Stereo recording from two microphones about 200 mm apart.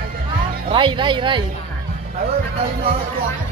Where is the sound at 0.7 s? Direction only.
25° right (ahead or behind).